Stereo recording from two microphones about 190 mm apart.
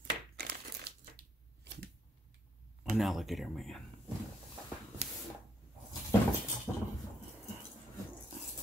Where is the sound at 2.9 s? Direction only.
Centre (ahead or behind).